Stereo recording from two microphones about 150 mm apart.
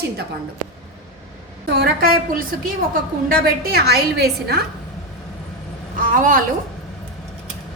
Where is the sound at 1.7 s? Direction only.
90° right.